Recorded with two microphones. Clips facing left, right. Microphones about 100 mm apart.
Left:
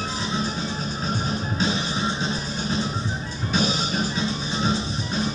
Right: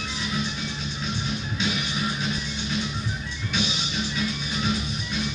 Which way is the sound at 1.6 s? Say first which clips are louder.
Left 3 dB; 35° left (ahead or behind).